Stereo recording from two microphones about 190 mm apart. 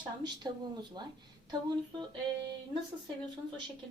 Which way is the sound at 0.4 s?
20° right (ahead or behind).